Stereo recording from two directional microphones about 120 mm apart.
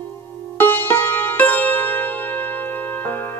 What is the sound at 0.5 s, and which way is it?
Music, 15° left (ahead or behind).